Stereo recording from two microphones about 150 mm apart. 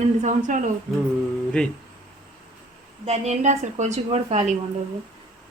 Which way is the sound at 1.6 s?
10° left (ahead or behind).